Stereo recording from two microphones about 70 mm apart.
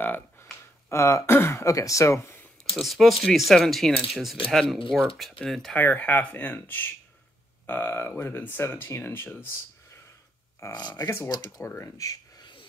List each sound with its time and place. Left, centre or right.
0.0 s a sound: left
0.8 s speech: left
2.7 s speech: centre
5.8 s speech: left
10.7 s speech: left
11.2 s speech: left
11.6 s speech: left